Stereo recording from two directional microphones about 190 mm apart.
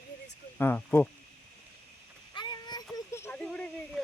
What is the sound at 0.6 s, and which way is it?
Speech, 10° left (ahead or behind).